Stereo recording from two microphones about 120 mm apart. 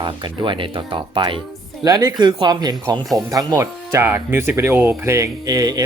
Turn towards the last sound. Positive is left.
turn(degrees=-30)  # may be behind; listen again after turning